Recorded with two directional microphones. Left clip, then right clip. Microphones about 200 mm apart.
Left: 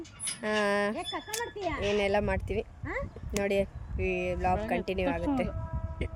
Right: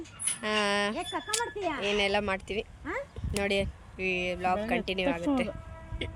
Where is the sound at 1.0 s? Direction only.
40° right (ahead or behind).